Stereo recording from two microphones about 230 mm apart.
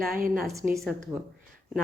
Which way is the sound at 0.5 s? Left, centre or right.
Centre.